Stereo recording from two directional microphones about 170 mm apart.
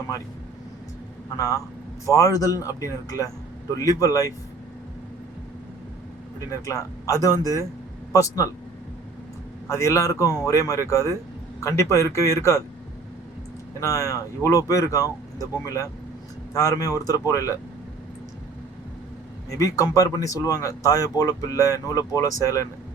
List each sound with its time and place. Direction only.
1.4 s speech: 20° left (ahead or behind)
6.5 s speech: 20° left (ahead or behind)
9.6 s speech: 15° left (ahead or behind)
13.7 s speech: 20° left (ahead or behind)
19.5 s speech: 20° left (ahead or behind)